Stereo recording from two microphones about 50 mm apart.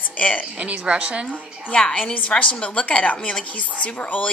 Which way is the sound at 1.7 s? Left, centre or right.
Left.